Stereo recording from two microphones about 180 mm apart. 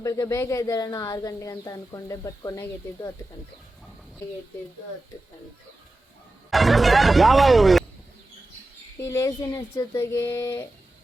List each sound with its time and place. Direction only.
0.0 s speech: 20° left (ahead or behind)
6.5 s speech: centre (ahead or behind)
9.0 s speech: 15° left (ahead or behind)